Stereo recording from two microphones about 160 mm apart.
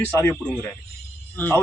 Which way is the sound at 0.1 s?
15° left (ahead or behind).